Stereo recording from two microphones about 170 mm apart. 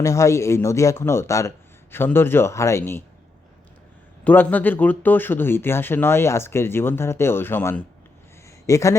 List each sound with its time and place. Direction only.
0.0 s speech: 20° left (ahead or behind)
4.2 s speech: 10° left (ahead or behind)